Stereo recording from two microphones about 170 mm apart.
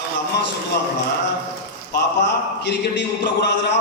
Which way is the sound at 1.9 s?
90° left.